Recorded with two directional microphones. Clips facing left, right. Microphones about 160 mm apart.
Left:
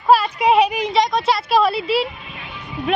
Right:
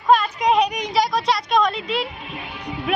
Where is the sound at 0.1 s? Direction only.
5° left (ahead or behind).